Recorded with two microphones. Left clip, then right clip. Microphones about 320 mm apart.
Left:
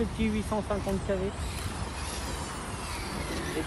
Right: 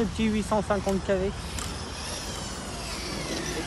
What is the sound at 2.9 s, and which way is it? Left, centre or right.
Vehicle, centre.